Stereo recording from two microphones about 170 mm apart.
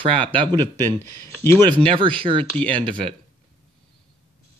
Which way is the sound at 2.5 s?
10° left (ahead or behind).